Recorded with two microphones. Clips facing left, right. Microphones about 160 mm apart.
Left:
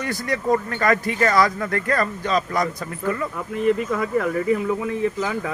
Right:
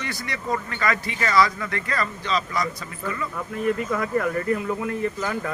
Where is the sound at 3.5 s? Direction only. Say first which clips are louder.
Left 4 dB; 5° left (ahead or behind).